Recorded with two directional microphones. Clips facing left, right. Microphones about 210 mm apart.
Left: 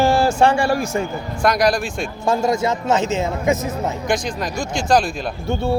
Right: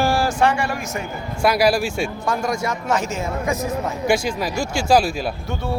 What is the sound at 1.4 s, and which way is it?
Speech, 5° right (ahead or behind).